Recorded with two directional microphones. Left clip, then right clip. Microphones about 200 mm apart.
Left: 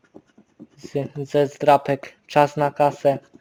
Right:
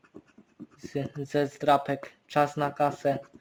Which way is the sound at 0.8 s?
40° left (ahead or behind).